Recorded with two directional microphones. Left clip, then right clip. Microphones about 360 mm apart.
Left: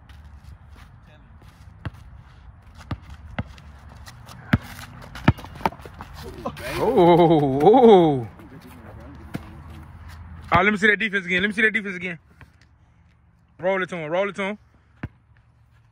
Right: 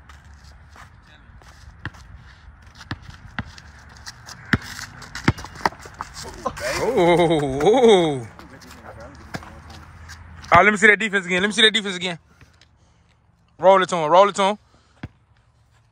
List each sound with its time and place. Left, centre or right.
1.8 s basketball bounce: left
4.0 s clip-clop: centre
6.6 s speech: centre
10.5 s a man's voice: centre
13.6 s speech: centre